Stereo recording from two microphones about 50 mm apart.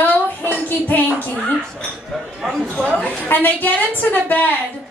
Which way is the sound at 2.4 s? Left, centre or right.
Centre.